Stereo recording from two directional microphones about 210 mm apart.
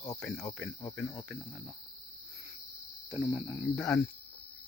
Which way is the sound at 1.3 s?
Centre (ahead or behind).